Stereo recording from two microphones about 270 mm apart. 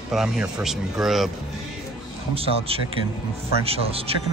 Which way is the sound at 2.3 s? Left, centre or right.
Right.